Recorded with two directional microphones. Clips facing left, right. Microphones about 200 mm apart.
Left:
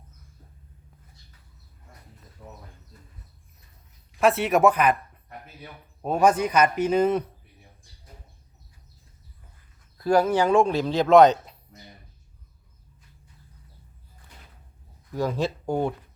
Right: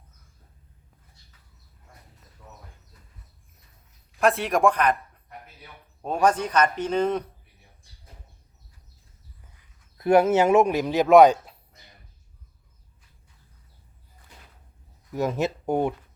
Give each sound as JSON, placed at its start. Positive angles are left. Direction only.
{"t": 4.2, "sound": "speech", "side_deg": 5}
{"t": 6.0, "sound": "a man's voice", "side_deg": 5}
{"t": 10.0, "sound": "speech", "side_deg": -20}
{"t": 15.1, "sound": "speech", "side_deg": -20}